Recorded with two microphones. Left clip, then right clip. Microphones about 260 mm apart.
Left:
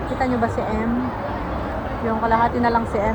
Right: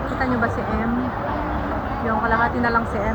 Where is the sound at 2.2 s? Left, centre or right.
Centre.